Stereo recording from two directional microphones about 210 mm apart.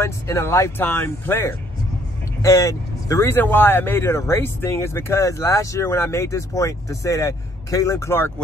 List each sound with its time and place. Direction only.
0.0 s speech: 10° left (ahead or behind)